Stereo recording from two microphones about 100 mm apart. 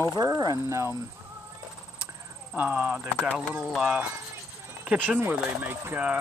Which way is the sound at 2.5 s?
15° right (ahead or behind).